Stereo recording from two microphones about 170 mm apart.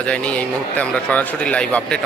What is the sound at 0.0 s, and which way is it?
Speech, 5° left (ahead or behind).